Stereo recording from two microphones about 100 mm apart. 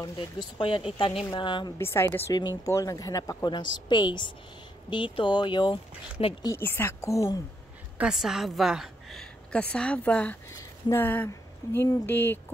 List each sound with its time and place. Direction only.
0.6 s speech: 60° left (ahead or behind)
1.8 s a woman's voice: 25° left (ahead or behind)
2.6 s speech: 35° left (ahead or behind); by 5.8 s 50° left (ahead or behind)
6.2 s speech: 75° left (ahead or behind)
6.6 s a woman's voice: 20° left (ahead or behind)
8.0 s a woman's voice: 5° right (ahead or behind); by 10.3 s 15° left (ahead or behind)
10.5 s a woman's voice: 25° left (ahead or behind)